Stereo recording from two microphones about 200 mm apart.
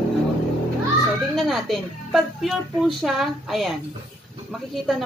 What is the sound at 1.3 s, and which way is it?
Speech, centre (ahead or behind).